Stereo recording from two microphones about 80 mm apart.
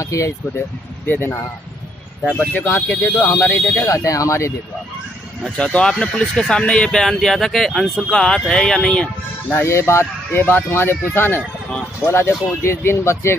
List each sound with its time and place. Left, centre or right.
0.0 s speech: left
1.0 s speech: left
3.2 s speech: left
3.4 s speech: left
3.8 s speech: left
5.4 s speech: centre
9.5 s speech: left